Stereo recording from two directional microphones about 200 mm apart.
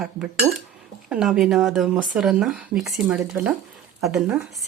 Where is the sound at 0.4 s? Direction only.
15° right (ahead or behind).